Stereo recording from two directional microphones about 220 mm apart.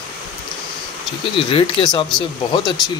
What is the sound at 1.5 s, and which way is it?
Speech, 25° left (ahead or behind).